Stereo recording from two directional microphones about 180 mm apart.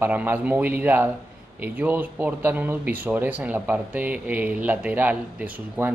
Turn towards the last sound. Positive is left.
turn(degrees=-10)  # may be behind; listen again after turning